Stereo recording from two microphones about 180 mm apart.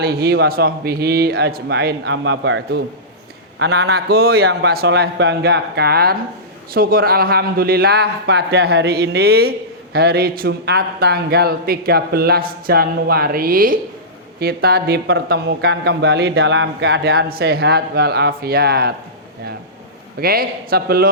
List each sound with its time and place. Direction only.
0.0 s a man's voice: 65° right (ahead or behind); by 2.8 s 85° right
3.6 s a man's voice: 65° right (ahead or behind)
20.1 s a man's voice: 55° right (ahead or behind)